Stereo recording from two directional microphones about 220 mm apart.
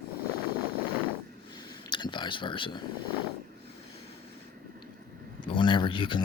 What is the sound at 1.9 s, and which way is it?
Speech, 20° left (ahead or behind).